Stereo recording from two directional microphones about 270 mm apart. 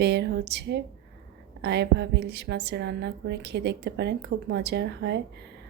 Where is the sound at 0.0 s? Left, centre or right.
Right.